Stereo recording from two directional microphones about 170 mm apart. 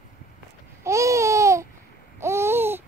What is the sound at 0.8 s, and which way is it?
Babbling, 15° right (ahead or behind).